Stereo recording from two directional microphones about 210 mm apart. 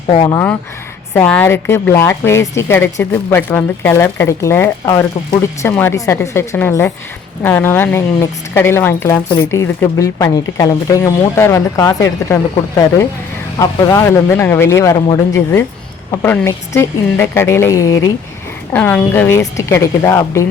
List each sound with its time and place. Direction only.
0.1 s a woman's voice: 20° left (ahead or behind)